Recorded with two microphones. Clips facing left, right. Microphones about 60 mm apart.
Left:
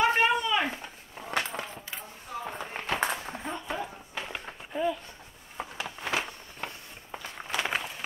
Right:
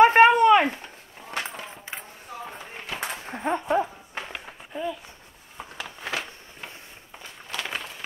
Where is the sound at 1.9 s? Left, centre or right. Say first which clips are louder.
Right 6 dB; right.